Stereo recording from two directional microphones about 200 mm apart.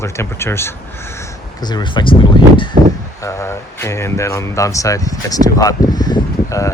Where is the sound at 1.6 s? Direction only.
20° left (ahead or behind).